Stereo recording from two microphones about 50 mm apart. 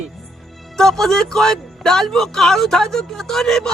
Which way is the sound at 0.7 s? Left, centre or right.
Centre.